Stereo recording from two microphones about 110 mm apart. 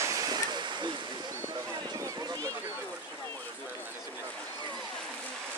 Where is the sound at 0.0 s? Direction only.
35° right (ahead or behind).